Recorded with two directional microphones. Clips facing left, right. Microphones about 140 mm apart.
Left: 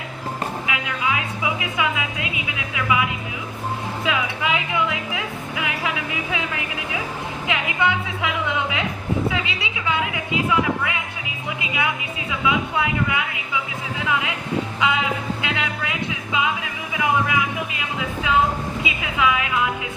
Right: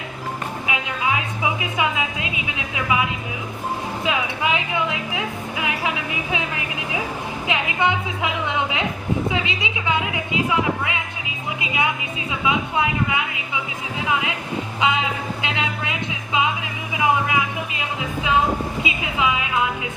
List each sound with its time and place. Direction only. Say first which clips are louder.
0.7 s a woman's voice: right 3 dB; 25° right (ahead or behind)
14.8 s speech: right 2 dB; 20° right (ahead or behind)
15.4 s music: even; 25° right (ahead or behind)
18.8 s speech: even; 25° right (ahead or behind)